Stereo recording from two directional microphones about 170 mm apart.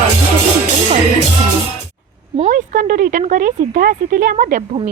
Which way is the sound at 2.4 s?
50° right (ahead or behind).